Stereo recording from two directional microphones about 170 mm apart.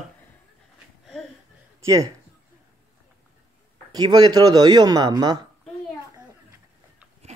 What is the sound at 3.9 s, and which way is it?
Speech, 25° right (ahead or behind).